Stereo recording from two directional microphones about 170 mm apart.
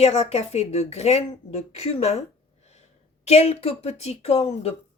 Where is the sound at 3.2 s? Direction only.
40° left (ahead or behind).